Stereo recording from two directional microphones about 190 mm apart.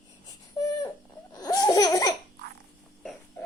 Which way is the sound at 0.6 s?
20° left (ahead or behind).